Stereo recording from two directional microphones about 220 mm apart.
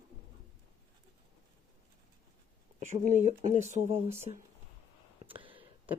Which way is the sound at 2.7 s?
30° right (ahead or behind).